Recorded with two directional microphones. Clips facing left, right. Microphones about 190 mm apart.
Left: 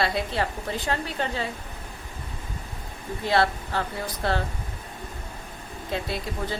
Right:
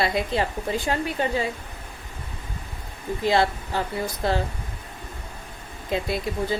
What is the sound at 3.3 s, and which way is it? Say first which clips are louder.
A woman's voice: even; 15° right (ahead or behind).